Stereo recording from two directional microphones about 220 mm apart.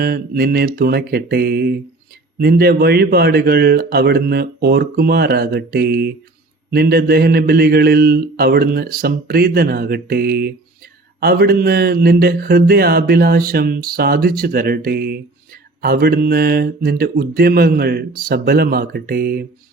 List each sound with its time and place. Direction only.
0.0 s speech: 45° right (ahead or behind)